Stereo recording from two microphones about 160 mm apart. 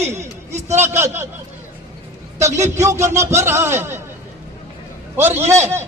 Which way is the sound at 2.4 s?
20° right (ahead or behind).